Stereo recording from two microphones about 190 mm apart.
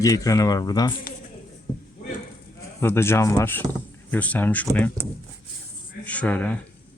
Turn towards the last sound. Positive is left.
turn(degrees=10)  # may be behind; listen again after turning